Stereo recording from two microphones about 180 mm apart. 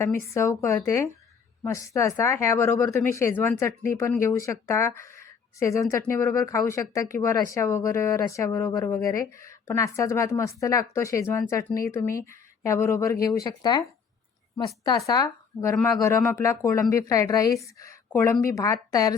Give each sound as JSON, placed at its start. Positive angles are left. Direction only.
{"t": 0.0, "sound": "speech", "side_deg": 15}
{"t": 5.1, "sound": "a sound", "side_deg": 15}
{"t": 6.1, "sound": "speech", "side_deg": 15}
{"t": 14.8, "sound": "speech", "side_deg": 20}